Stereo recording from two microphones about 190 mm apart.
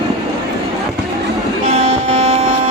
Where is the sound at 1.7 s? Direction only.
30° right (ahead or behind).